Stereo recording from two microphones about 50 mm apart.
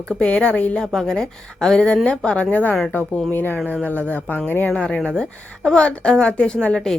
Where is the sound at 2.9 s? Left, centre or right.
Left.